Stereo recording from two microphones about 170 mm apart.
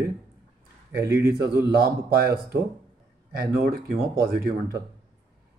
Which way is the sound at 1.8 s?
65° right (ahead or behind).